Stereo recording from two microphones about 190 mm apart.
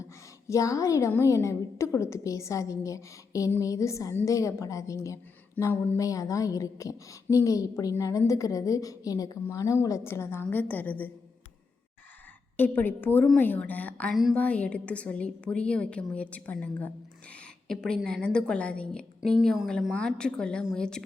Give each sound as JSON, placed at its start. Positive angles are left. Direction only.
{"t": 0.0, "sound": "a woman's voice", "side_deg": 15}
{"t": 12.5, "sound": "a woman's voice", "side_deg": 10}